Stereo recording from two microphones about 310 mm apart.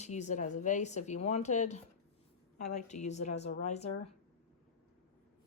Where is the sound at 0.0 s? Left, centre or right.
Left.